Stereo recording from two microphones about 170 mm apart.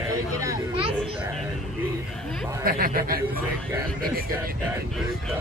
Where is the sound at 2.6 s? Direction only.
60° right (ahead or behind).